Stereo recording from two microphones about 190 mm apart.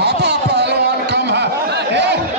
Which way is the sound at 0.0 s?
65° right (ahead or behind).